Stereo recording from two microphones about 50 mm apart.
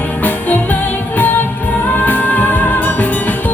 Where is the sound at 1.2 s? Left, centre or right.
Left.